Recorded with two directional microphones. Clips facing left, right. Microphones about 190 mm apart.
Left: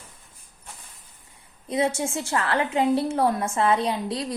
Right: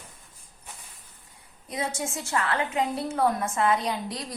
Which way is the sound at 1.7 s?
25° left (ahead or behind).